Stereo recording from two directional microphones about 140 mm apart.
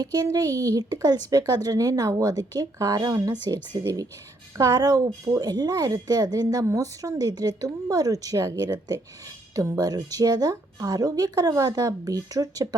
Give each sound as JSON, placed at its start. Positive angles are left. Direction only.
{"t": 0.0, "sound": "a woman's voice", "side_deg": -30}